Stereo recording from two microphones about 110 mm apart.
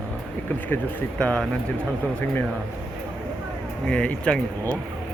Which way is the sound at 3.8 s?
10° left (ahead or behind).